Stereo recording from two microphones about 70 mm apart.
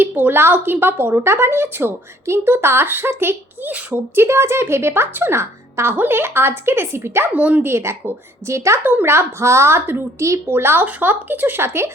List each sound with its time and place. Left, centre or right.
0.0 s speech: right
3.7 s speech: right
4.1 s speech: right
7.3 s speech: right
7.6 s speech: right
8.8 s speech: right
10.2 s speech: right
10.4 s speech: right